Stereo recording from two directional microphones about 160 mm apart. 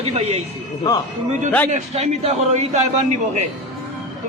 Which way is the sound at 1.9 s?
40° right (ahead or behind).